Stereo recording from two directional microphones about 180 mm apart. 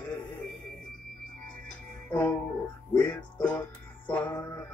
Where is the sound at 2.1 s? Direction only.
5° left (ahead or behind).